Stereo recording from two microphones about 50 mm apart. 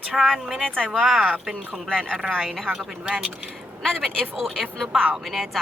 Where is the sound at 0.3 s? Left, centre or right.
Centre.